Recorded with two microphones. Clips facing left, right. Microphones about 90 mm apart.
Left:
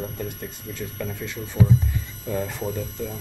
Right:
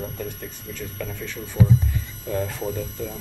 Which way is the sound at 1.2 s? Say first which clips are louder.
Even; 10° left (ahead or behind).